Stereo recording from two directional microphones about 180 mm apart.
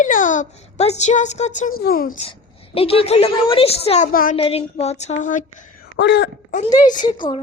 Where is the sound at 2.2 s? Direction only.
30° left (ahead or behind).